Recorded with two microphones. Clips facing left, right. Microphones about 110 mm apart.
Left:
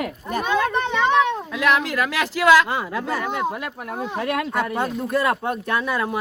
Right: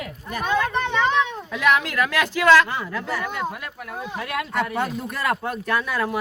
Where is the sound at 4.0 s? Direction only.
35° left (ahead or behind).